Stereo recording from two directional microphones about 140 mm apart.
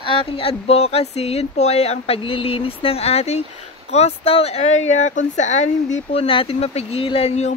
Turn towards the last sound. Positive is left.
turn(degrees=50)  # may be behind; listen again after turning